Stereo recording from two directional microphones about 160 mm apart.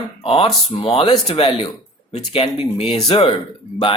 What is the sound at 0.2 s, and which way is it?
Speech, 35° left (ahead or behind).